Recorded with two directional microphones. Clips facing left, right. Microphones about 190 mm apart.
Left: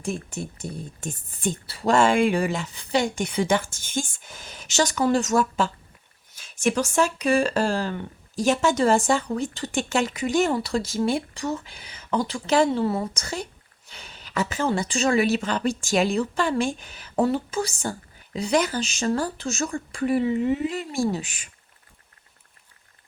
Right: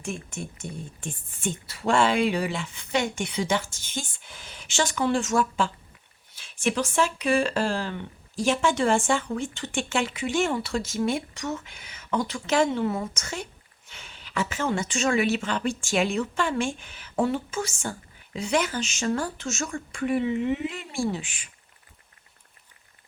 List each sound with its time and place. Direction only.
0.0 s speech: 35° left (ahead or behind)
3.3 s speech: 50° left (ahead or behind)